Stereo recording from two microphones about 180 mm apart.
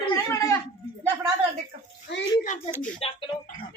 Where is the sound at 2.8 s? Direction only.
35° left (ahead or behind).